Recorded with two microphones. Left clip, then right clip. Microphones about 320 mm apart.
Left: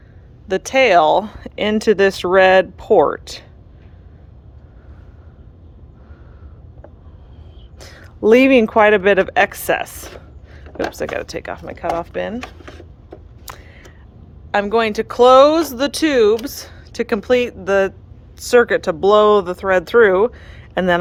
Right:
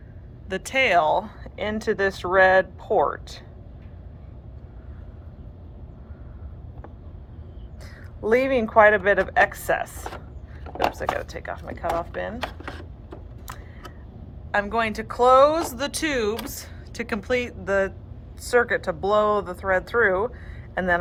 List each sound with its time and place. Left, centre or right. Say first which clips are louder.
0.4 s speech: left 8 dB; centre
7.8 s speech: left 12 dB; left
13.5 s a sound: left 5 dB; left
14.5 s speech: left 7 dB; centre